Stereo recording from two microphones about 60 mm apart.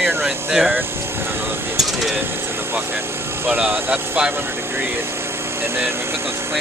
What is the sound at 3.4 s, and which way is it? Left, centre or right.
Speech, right.